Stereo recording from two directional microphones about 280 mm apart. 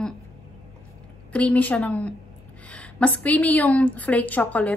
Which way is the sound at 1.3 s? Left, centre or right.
Centre.